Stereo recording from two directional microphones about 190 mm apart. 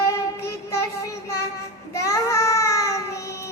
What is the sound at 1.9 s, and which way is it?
Child singing, 15° left (ahead or behind).